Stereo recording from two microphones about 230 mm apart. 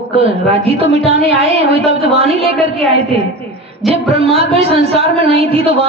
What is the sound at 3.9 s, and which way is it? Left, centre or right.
Speech, right.